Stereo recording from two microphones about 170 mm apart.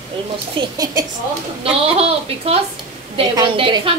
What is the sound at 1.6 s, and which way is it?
A woman's voice, 35° right (ahead or behind).